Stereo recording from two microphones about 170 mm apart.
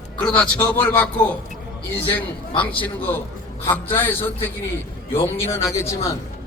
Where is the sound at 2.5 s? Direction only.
10° left (ahead or behind).